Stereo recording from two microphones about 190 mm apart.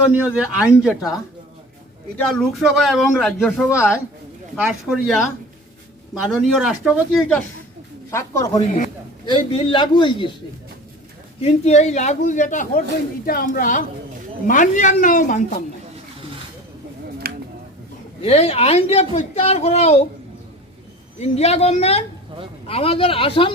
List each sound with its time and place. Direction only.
0.1 s speech: 5° right (ahead or behind)
2.3 s speech: centre (ahead or behind)
6.3 s speech: 5° right (ahead or behind)
8.1 s a man's voice: 15° left (ahead or behind)
9.2 s a man's voice: 25° left (ahead or behind)
11.3 s a woman's voice: 35° left (ahead or behind)
17.2 s a sound: 50° right (ahead or behind)
18.2 s a woman's voice: 30° left (ahead or behind)
21.2 s a woman's voice: 35° left (ahead or behind)